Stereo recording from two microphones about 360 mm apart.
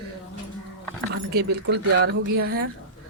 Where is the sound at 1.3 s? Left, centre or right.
Right.